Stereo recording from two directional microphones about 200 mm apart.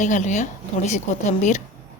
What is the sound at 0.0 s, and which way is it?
A woman's voice, 35° left (ahead or behind).